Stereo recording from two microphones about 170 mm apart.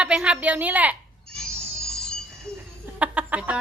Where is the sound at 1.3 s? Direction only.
5° left (ahead or behind).